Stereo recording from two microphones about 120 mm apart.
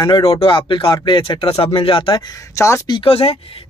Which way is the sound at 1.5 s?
50° left (ahead or behind).